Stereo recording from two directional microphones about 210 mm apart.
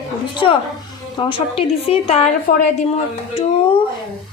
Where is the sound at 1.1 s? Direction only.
25° left (ahead or behind).